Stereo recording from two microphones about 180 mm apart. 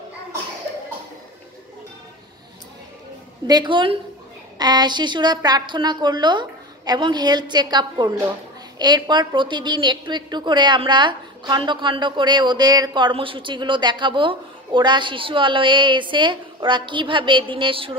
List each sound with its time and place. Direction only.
3.4 s a woman's voice: 25° right (ahead or behind)